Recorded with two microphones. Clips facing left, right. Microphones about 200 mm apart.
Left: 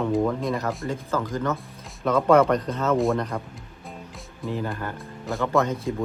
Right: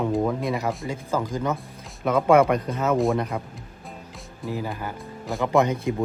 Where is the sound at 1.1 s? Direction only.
10° right (ahead or behind).